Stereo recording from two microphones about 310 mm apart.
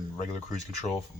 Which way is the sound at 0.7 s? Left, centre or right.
Left.